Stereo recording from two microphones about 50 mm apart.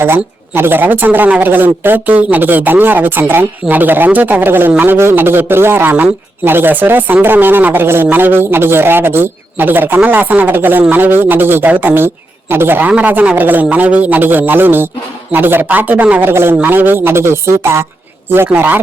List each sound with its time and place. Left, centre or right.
0.0 s speech: right
15.6 s speech: right
16.2 s speech: right
18.5 s speech: right